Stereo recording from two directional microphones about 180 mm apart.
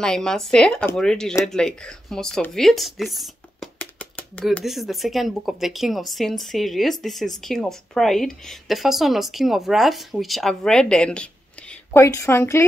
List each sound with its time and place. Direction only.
0.0 s speech: 5° left (ahead or behind)
11.9 s a woman's voice: 15° left (ahead or behind)